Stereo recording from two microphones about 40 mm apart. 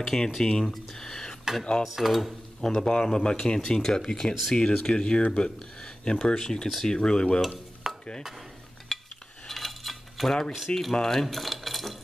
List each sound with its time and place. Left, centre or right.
0.0 s speech: centre
0.7 s a sound: centre
2.0 s speech: centre
2.6 s speech: centre
4.6 s speech: left
7.8 s dishes: centre
8.9 s cutlery: centre
9.5 s coin: centre
10.8 s speech: centre